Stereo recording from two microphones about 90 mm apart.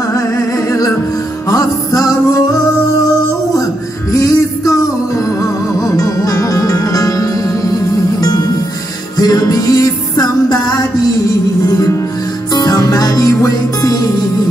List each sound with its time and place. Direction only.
0.7 s music: 40° left (ahead or behind)
4.1 s music: 40° left (ahead or behind)
9.1 s music: 45° left (ahead or behind)
11.6 s music: 45° left (ahead or behind)